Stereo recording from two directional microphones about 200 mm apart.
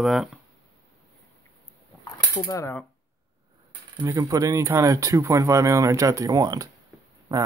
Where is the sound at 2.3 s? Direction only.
15° left (ahead or behind).